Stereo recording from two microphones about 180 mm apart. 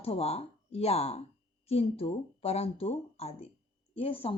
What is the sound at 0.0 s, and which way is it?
Speech, 35° left (ahead or behind).